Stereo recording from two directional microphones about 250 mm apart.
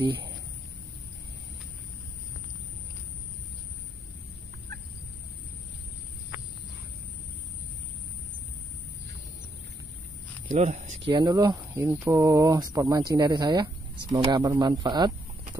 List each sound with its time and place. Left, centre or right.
10.5 s speech: right